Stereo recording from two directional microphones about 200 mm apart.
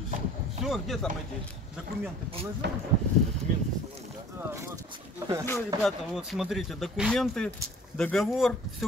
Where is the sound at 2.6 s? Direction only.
60° right (ahead or behind).